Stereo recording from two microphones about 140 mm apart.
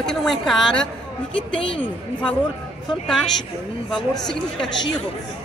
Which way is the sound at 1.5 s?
40° left (ahead or behind).